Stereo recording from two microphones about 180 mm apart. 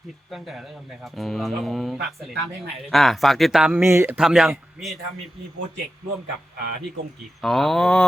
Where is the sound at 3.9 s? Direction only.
15° right (ahead or behind).